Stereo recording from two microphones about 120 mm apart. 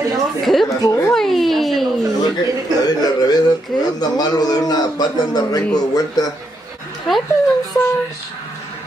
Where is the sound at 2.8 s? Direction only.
30° left (ahead or behind).